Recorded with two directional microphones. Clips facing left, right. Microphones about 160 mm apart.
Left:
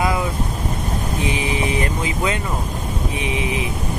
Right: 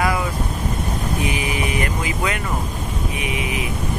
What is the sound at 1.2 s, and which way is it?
Speech, 30° left (ahead or behind).